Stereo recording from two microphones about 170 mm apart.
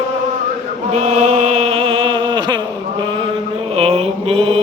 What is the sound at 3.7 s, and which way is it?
Mantra, 35° right (ahead or behind).